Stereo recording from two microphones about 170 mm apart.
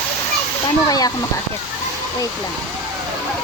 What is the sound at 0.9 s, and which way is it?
Speech, 20° left (ahead or behind).